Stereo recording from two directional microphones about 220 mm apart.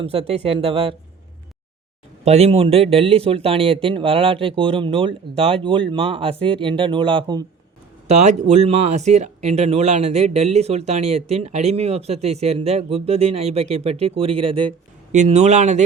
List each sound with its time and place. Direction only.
0.0 s speech: 25° right (ahead or behind)
2.2 s speech: 30° right (ahead or behind)
8.0 s speech: 30° right (ahead or behind)